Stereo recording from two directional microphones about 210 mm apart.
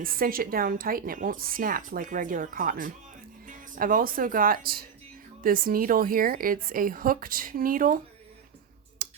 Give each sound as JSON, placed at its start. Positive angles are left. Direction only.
{"t": 0.0, "sound": "a woman's voice", "side_deg": -45}
{"t": 9.0, "sound": "clicking", "side_deg": -40}